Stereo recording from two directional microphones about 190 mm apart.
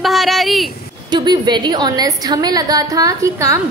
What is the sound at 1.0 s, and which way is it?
A woman's voice, 20° right (ahead or behind).